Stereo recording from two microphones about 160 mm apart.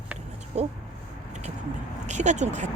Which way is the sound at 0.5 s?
45° right (ahead or behind).